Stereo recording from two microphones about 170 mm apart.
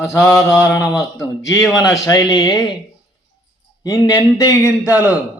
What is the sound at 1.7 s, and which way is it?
Speech, 20° left (ahead or behind).